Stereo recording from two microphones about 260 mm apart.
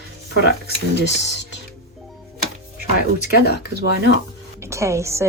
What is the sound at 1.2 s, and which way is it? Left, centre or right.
Speech, left.